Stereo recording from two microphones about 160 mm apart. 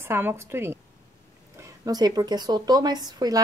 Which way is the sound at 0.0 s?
15° right (ahead or behind).